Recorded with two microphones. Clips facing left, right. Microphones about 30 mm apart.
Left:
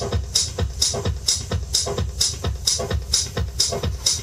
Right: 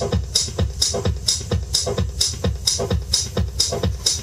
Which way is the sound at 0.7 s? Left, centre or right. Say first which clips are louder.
Right 1 dB; centre.